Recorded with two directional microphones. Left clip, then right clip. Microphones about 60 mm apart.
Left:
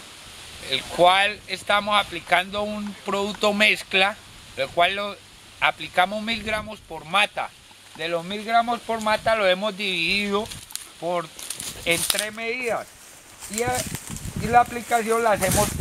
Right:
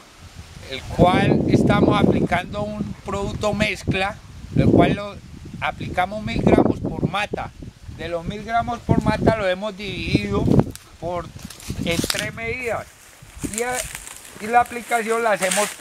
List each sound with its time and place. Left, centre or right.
0.7 s speech: centre
8.0 s speech: right
12.1 s speech: centre; by 15.7 s right